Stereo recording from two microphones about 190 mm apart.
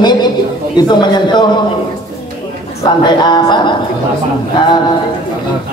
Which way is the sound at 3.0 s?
25° left (ahead or behind).